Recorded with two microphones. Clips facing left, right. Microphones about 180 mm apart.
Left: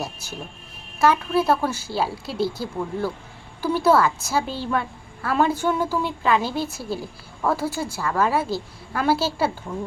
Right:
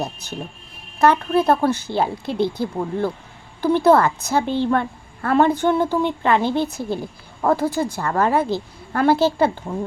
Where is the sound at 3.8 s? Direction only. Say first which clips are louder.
Right 2 dB; 55° right (ahead or behind).